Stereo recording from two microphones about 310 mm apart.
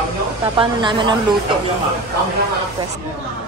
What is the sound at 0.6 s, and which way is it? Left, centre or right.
Speech, centre.